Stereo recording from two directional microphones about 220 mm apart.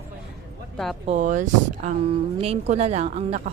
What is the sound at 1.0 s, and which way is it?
Speech, 30° right (ahead or behind).